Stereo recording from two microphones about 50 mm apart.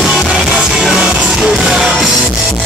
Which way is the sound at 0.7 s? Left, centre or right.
Centre.